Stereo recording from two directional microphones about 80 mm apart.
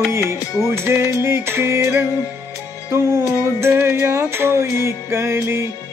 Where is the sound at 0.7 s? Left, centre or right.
Right.